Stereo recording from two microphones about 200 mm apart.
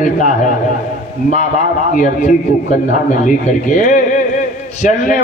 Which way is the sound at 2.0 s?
40° left (ahead or behind).